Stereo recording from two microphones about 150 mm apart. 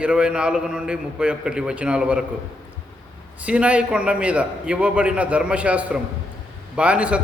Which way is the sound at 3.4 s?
10° right (ahead or behind).